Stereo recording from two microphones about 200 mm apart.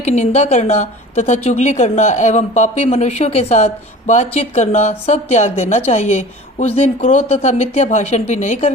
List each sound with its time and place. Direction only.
0.0 s a woman's voice: 30° left (ahead or behind)